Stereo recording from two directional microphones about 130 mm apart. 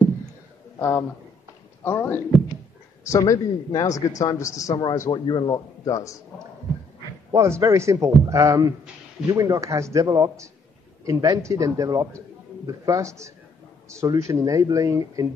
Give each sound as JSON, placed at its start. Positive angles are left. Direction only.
{"t": 0.7, "sound": "a man's voice", "side_deg": 20}
{"t": 7.2, "sound": "a man's voice", "side_deg": -20}